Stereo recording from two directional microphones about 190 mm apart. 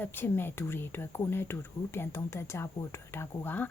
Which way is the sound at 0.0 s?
10° left (ahead or behind).